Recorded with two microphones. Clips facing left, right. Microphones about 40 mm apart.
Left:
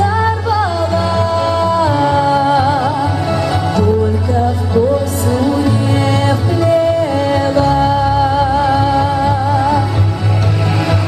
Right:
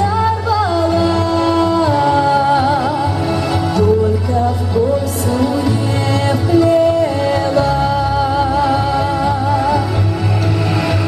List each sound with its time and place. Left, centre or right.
0.0 s music: centre
5.3 s music: centre